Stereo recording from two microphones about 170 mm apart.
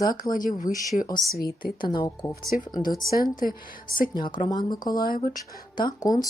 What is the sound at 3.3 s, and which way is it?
Speech, 55° left (ahead or behind).